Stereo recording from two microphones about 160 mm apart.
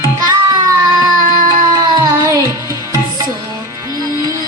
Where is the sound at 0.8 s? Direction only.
25° right (ahead or behind).